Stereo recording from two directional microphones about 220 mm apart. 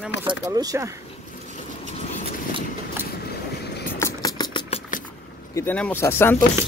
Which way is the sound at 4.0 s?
15° left (ahead or behind).